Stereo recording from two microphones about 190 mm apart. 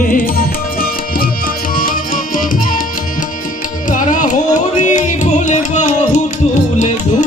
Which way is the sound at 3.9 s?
40° left (ahead or behind).